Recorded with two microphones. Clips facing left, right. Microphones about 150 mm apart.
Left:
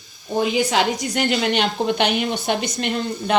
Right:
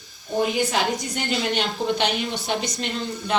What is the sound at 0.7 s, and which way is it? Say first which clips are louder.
A woman's voice: left 4 dB; 90° left.